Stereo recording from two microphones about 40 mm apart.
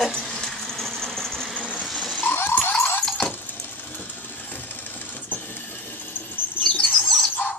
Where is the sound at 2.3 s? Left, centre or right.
Left.